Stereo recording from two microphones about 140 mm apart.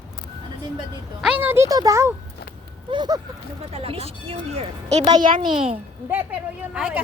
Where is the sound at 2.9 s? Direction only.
30° right (ahead or behind).